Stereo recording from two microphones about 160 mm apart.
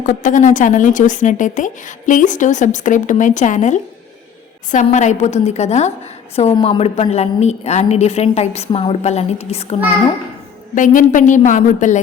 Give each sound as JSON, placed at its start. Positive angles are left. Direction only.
{"t": 0.0, "sound": "a woman's voice", "side_deg": 55}
{"t": 10.8, "sound": "a woman's voice", "side_deg": 55}